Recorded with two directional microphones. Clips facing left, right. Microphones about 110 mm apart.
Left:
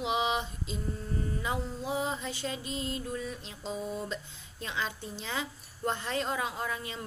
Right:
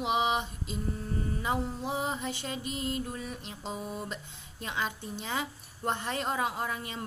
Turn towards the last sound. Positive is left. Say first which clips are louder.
# right 1 dB
turn(degrees=-20)  # may be behind; listen again after turning